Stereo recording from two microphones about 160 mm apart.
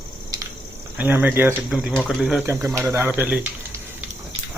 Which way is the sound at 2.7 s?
15° right (ahead or behind).